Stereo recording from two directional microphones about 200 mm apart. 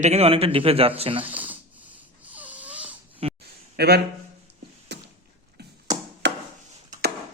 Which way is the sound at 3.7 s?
55° right (ahead or behind).